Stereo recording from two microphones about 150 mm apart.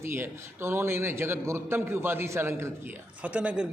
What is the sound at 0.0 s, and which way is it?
A man's voice, 15° right (ahead or behind).